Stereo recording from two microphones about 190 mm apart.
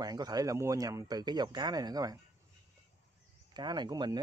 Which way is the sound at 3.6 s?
20° right (ahead or behind).